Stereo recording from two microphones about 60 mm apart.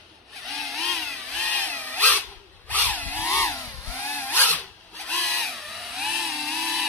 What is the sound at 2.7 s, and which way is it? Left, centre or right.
Power tool, left.